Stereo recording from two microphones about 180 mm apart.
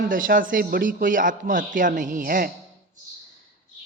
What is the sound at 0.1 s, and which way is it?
A man's voice, 50° right (ahead or behind).